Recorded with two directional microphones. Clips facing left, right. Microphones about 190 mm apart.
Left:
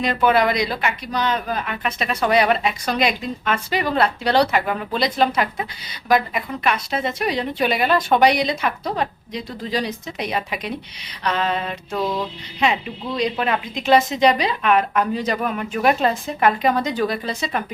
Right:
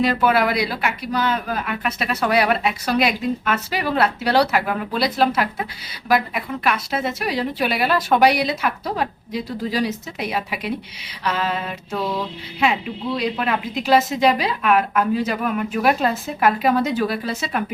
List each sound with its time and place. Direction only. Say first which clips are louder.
0.0 s speech: even; 5° right (ahead or behind)
13.1 s speech: left 2 dB; centre (ahead or behind)